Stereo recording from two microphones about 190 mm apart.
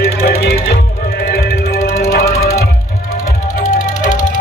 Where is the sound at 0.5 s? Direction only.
50° left (ahead or behind).